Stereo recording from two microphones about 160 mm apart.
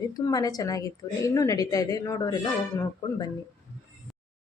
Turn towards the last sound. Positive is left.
turn(degrees=20)  # may be behind; listen again after turning